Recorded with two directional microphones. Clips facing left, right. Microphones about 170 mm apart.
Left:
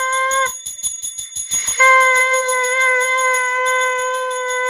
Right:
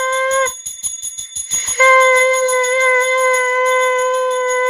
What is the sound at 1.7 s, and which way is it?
Jingle bell, 30° right (ahead or behind).